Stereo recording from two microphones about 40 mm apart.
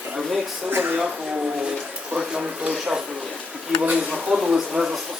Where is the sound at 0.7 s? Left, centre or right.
Right.